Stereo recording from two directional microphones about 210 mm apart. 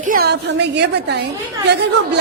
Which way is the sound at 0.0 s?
45° right (ahead or behind).